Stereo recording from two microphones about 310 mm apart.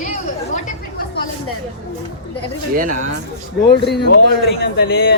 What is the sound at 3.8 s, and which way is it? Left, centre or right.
Speech, left.